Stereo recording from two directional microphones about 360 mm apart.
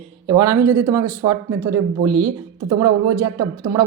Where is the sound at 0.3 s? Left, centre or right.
Centre.